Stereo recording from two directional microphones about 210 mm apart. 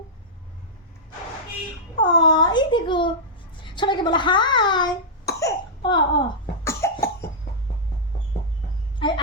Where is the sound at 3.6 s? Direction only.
20° left (ahead or behind).